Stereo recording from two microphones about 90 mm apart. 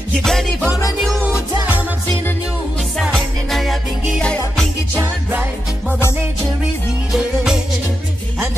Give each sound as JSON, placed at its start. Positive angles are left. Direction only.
{"t": 0.2, "sound": "music", "side_deg": 5}
{"t": 1.2, "sound": "music", "side_deg": -15}
{"t": 3.1, "sound": "music", "side_deg": 0}
{"t": 5.3, "sound": "music", "side_deg": -20}
{"t": 7.1, "sound": "music", "side_deg": -5}